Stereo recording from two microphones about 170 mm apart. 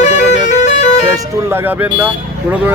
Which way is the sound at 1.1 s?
15° right (ahead or behind).